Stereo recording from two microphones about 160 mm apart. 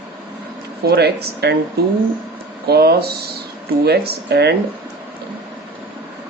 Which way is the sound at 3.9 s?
85° right.